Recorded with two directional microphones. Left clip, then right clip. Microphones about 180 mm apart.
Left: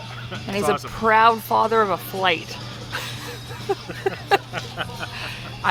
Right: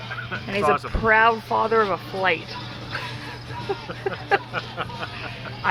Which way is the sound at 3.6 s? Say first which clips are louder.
Left 4 dB; 35° left (ahead or behind).